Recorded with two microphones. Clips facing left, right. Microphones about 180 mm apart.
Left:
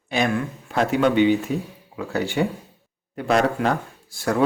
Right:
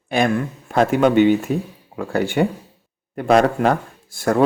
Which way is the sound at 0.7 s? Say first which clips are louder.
Right 4 dB; 45° right (ahead or behind).